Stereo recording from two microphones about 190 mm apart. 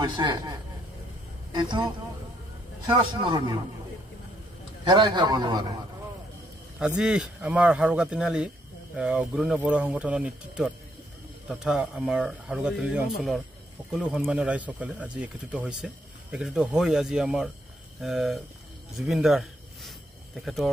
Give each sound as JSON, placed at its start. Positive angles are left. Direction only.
{"t": 0.0, "sound": "a man's voice", "side_deg": -25}
{"t": 2.9, "sound": "a man's voice", "side_deg": -25}
{"t": 4.8, "sound": "a man's voice", "side_deg": -25}
{"t": 7.0, "sound": "a man's voice", "side_deg": -5}
{"t": 18.9, "sound": "a sound", "side_deg": 0}